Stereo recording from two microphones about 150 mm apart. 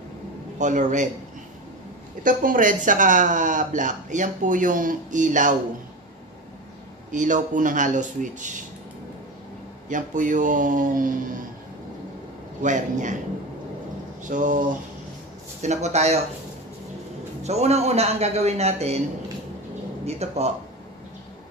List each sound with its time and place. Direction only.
0.6 s speech: 55° right (ahead or behind)
2.2 s speech: 65° right (ahead or behind)
7.1 s speech: 55° right (ahead or behind)
9.8 s speech: 60° right (ahead or behind)
12.6 s speech: 55° right (ahead or behind)
14.2 s speech: 60° right (ahead or behind)
15.6 s a man's voice: 50° right (ahead or behind)
17.4 s a man's voice: 45° right (ahead or behind)
20.1 s a man's voice: 45° right (ahead or behind)